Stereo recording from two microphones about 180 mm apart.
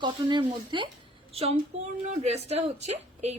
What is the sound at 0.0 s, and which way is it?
A woman's voice, 25° right (ahead or behind).